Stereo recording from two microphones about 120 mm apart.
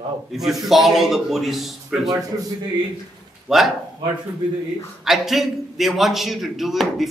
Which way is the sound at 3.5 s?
Centre (ahead or behind).